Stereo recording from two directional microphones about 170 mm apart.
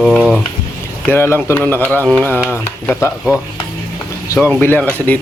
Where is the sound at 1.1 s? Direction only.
15° left (ahead or behind).